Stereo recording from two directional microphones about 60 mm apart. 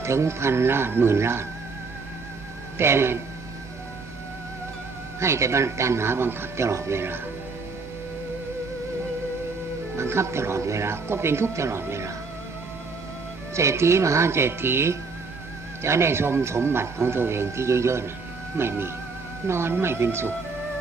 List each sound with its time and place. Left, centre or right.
0.0 s a man's voice: right
2.7 s a man's voice: right
5.2 s a man's voice: right
6.7 s a man's voice: right
10.0 s a man's voice: right
13.5 s a man's voice: right